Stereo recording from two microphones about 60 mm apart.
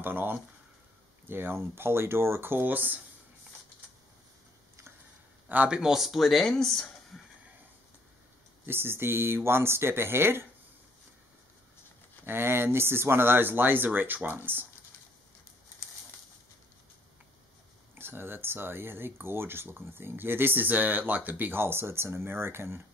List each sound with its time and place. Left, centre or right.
0.0 s speech: right
5.7 s speech: centre
8.6 s speech: right
12.3 s speech: right
17.9 s speech: right